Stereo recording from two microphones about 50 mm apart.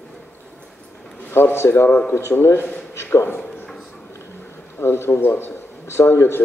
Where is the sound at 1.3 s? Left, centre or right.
Left.